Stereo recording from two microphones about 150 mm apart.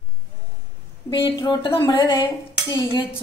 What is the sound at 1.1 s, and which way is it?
Speech, 30° left (ahead or behind).